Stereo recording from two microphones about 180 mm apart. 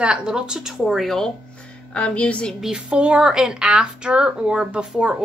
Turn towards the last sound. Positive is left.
turn(degrees=-5)  # may be behind; listen again after turning